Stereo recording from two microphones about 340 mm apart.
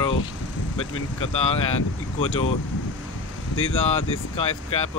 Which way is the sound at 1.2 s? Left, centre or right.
Centre.